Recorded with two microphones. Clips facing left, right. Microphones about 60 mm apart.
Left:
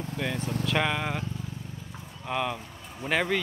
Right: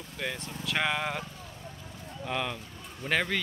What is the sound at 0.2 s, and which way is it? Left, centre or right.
Speech, centre.